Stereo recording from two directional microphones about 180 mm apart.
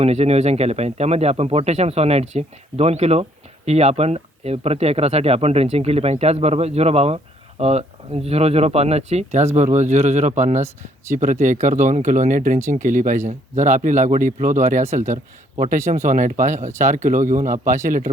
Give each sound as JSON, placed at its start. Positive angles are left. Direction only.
{"t": 0.0, "sound": "a man's voice", "side_deg": -35}